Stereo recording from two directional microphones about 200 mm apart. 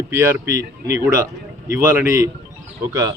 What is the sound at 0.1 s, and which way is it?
A man's voice, 10° right (ahead or behind).